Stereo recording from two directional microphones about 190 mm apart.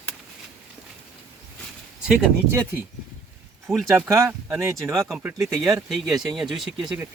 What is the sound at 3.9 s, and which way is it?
Speech, 15° right (ahead or behind).